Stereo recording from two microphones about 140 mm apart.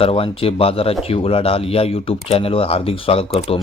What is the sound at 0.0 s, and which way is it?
A man's voice, 40° left (ahead or behind).